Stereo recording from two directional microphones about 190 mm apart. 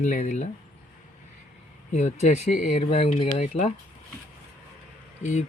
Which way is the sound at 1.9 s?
35° left (ahead or behind).